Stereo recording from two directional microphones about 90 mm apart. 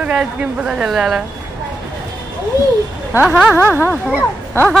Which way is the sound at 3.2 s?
15° right (ahead or behind).